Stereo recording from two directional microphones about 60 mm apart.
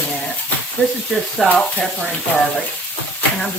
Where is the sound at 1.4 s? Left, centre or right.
Centre.